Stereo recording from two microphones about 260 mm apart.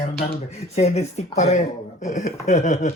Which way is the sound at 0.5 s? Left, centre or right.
Left.